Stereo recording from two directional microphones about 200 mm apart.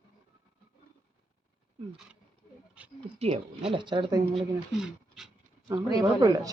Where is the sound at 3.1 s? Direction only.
30° right (ahead or behind).